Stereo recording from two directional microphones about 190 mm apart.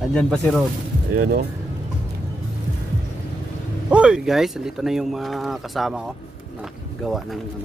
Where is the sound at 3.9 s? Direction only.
5° right (ahead or behind).